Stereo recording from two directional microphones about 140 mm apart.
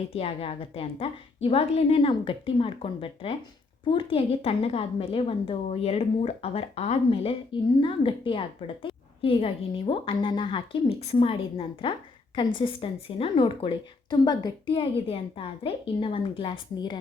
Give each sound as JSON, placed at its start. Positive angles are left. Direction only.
{"t": 0.1, "sound": "a woman's voice", "side_deg": 45}